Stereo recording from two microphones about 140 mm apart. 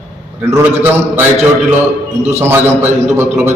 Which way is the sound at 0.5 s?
15° right (ahead or behind).